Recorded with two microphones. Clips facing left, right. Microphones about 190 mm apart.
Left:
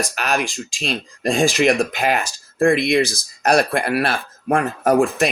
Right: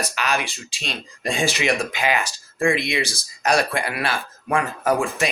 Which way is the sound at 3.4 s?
60° left (ahead or behind).